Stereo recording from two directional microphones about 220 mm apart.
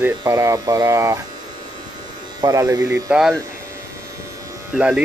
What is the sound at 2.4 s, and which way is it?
Speech, 15° right (ahead or behind).